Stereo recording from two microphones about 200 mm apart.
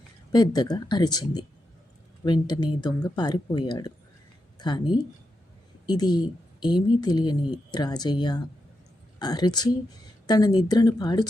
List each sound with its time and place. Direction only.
0.3 s a woman's voice: 20° left (ahead or behind)
5.8 s a woman's voice: 20° left (ahead or behind)